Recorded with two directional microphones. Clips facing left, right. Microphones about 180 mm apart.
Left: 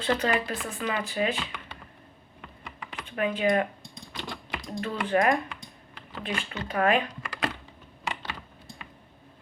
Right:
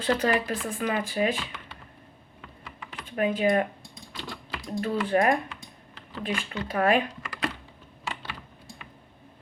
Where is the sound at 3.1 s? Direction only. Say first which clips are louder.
Right 1 dB; 35° right (ahead or behind).